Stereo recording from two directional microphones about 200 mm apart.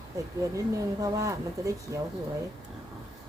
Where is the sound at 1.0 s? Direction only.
15° right (ahead or behind).